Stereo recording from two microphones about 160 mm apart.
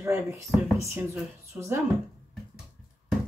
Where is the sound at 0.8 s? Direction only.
20° right (ahead or behind).